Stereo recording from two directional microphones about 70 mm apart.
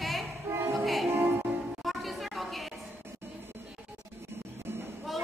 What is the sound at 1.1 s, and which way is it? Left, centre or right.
Music, right.